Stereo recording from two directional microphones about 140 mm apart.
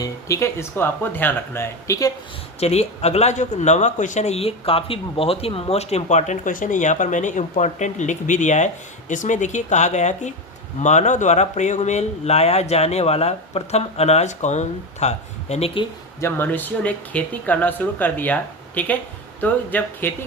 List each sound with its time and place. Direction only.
0.0 s speech: 20° left (ahead or behind)
2.6 s speech: 50° left (ahead or behind)
16.2 s speech: 15° left (ahead or behind)